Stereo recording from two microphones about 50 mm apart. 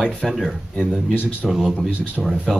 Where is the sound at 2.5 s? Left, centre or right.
Centre.